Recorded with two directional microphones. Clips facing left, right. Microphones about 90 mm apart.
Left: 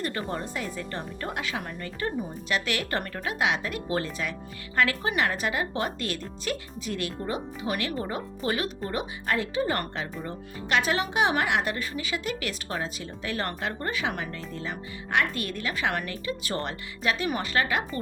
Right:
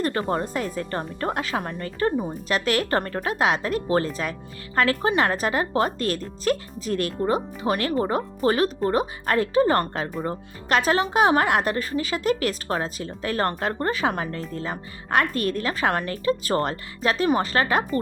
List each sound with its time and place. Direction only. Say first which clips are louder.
0.0 s speech: right 7 dB; 40° right (ahead or behind)